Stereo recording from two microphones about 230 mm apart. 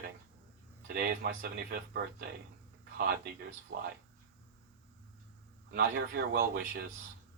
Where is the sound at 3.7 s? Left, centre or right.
Right.